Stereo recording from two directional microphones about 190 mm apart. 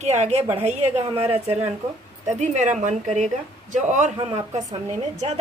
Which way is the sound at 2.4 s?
40° right (ahead or behind).